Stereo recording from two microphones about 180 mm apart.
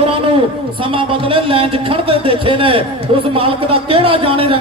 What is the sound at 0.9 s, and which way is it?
A man's voice, 30° right (ahead or behind).